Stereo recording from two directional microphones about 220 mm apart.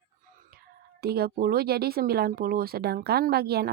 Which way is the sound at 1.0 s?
45° right (ahead or behind).